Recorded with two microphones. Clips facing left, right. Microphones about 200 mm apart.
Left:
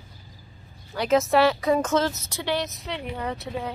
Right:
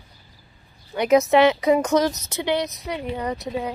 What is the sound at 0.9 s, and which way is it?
A woman's voice, 15° right (ahead or behind).